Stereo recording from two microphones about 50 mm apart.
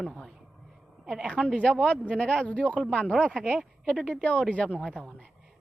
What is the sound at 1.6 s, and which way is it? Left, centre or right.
A man's voice, centre.